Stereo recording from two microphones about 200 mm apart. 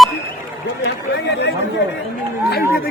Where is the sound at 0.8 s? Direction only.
60° left (ahead or behind).